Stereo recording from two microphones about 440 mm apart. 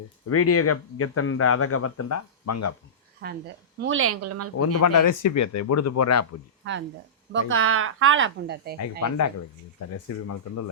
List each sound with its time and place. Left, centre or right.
0.3 s speech: left
3.2 s a woman's voice: right
4.8 s speech: left
6.6 s a woman's voice: right
8.8 s speech: left